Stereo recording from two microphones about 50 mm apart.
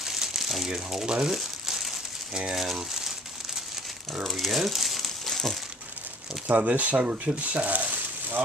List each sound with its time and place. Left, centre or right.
0.0 s crumpling: centre
0.7 s speech: centre
1.2 s crumpling: centre
2.5 s speech: centre
4.2 s speech: centre
6.4 s speech: right
7.6 s a sound: right